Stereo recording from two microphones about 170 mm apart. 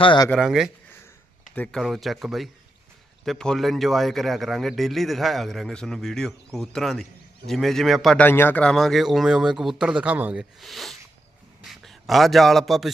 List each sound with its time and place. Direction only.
0.0 s speech: 30° left (ahead or behind)
0.3 s a man's voice: centre (ahead or behind)